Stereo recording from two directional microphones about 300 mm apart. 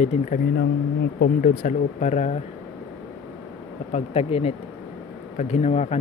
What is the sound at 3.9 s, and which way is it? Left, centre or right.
Speech, centre.